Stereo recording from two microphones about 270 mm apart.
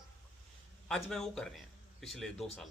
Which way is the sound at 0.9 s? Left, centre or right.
Centre.